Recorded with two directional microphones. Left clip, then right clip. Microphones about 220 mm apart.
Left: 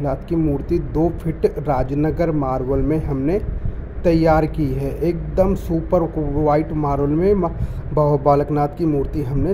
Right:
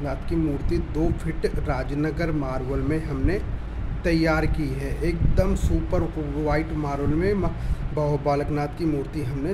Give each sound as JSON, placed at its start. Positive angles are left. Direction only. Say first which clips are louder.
{"t": 0.0, "sound": "speech", "louder": "left 6 dB", "side_deg": 20}